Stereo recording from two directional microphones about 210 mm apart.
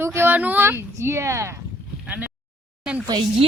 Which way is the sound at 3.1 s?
25° right (ahead or behind).